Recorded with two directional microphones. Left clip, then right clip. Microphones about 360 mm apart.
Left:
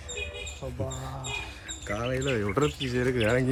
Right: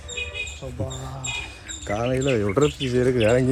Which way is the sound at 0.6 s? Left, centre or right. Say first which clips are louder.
Right 3 dB; centre.